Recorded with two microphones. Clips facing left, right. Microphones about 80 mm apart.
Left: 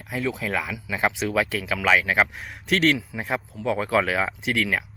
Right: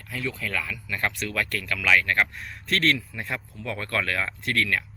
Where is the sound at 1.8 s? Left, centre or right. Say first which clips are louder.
Left 2 dB; left.